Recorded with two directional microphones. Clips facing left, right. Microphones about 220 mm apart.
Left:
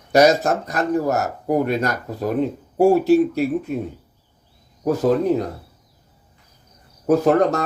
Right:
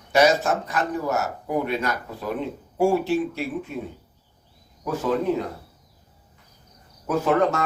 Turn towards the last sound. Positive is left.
turn(degrees=40)  # may be behind; listen again after turning